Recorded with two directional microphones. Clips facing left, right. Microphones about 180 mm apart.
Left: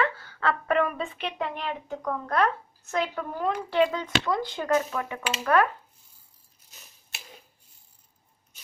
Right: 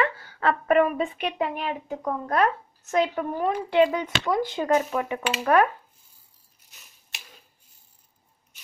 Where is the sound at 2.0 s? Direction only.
20° right (ahead or behind).